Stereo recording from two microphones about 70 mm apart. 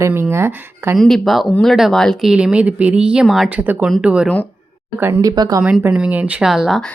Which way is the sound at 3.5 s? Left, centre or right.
Right.